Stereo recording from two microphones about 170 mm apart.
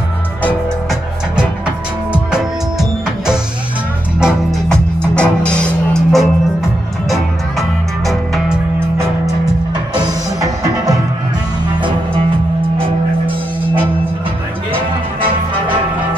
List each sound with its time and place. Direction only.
2.1 s music: 5° right (ahead or behind)
9.9 s music: 20° right (ahead or behind)
15.1 s music: 30° right (ahead or behind)